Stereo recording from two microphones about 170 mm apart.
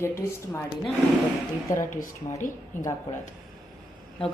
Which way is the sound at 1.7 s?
50° left (ahead or behind).